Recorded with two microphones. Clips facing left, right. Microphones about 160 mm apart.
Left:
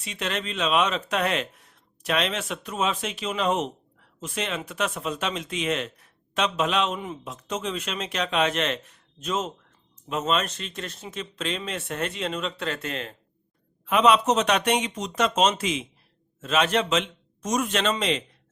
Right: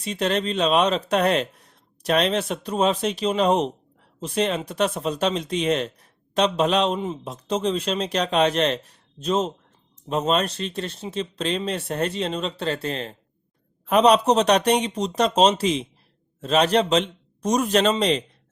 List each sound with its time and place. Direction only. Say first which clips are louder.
0.0 s speech: right 7 dB; 35° right (ahead or behind)